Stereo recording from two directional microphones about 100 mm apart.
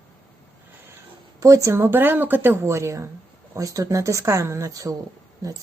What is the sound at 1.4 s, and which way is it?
Speech, 30° right (ahead or behind).